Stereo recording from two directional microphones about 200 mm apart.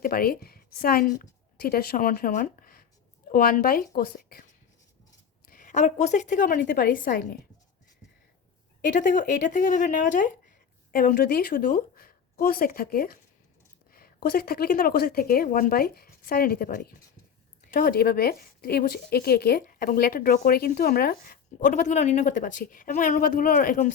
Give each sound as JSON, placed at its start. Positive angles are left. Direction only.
{"t": 0.0, "sound": "a woman's voice", "side_deg": 45}
{"t": 5.5, "sound": "a woman's voice", "side_deg": 40}
{"t": 8.9, "sound": "a woman's voice", "side_deg": 40}